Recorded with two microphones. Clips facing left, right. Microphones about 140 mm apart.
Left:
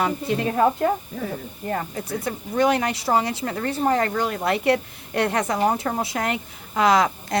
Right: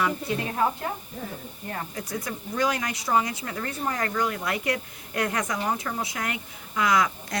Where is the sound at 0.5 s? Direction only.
65° left (ahead or behind).